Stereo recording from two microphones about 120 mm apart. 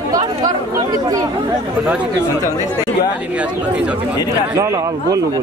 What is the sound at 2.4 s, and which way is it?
Speech, 30° left (ahead or behind).